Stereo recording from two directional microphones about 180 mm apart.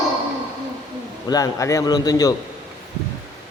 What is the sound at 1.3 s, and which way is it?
A man's voice, 20° left (ahead or behind).